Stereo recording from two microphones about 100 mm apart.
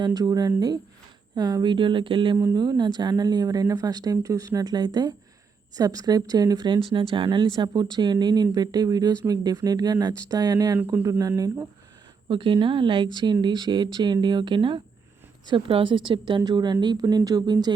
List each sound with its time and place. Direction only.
0.0 s speech: 40° right (ahead or behind); by 2.4 s 55° right (ahead or behind)
2.6 s speech: 45° right (ahead or behind)
12.3 s a woman's voice: 60° right (ahead or behind)